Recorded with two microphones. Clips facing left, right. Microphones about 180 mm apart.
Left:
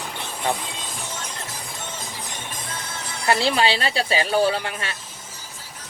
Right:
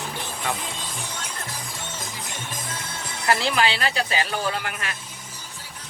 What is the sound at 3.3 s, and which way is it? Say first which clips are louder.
Speech: left 2 dB; 30° left (ahead or behind).